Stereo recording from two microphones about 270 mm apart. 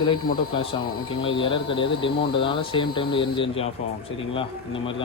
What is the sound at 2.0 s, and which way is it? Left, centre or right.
Speech, centre.